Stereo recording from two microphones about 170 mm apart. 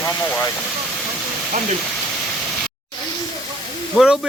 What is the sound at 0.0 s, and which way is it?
Vehicle, 15° left (ahead or behind).